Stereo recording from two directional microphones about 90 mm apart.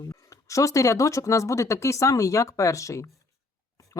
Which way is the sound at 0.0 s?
40° left (ahead or behind).